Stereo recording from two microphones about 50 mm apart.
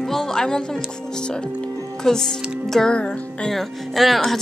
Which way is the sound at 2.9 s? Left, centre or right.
Left.